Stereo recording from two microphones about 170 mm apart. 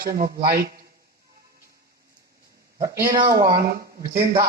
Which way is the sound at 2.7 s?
20° right (ahead or behind).